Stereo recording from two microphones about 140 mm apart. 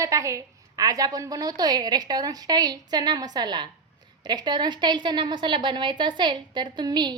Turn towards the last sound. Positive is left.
turn(degrees=-30)  # may be behind; listen again after turning